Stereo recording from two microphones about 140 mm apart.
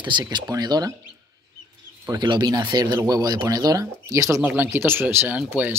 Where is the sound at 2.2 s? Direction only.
30° right (ahead or behind).